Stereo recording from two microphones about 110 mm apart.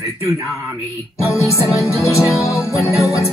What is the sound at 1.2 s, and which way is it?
Music, 25° left (ahead or behind).